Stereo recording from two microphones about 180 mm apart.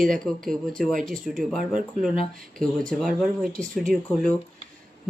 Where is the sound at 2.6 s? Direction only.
5° left (ahead or behind).